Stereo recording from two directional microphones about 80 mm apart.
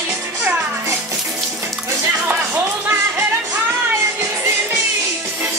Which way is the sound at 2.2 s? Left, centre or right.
Right.